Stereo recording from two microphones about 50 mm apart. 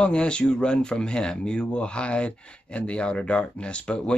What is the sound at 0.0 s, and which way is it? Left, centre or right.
Speech, left.